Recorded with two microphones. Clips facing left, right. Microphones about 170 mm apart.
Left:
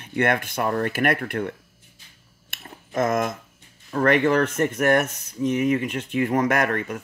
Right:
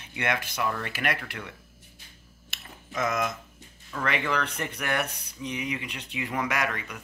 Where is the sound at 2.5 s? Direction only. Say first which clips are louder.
Left 8 dB; 50° left (ahead or behind).